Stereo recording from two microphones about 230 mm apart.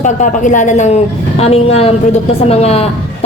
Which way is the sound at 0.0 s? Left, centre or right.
Left.